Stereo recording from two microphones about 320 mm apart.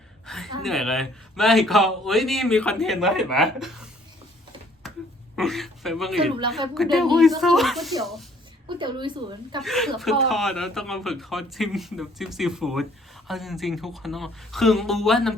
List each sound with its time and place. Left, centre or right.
0.3 s a sound: centre
0.6 s speech: centre
5.4 s speech: centre
8.6 s speech: centre
9.6 s speech: centre